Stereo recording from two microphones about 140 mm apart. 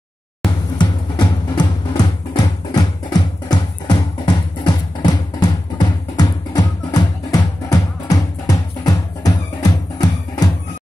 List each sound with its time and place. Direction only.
0.7 s music: 35° left (ahead or behind)